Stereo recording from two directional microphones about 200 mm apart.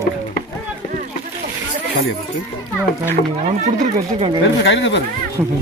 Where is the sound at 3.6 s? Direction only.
35° right (ahead or behind).